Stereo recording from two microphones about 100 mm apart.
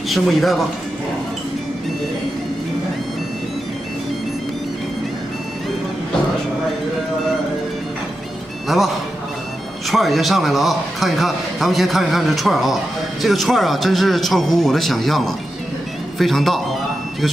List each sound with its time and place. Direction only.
0.1 s a man's voice: centre (ahead or behind)
8.6 s a man's voice: centre (ahead or behind)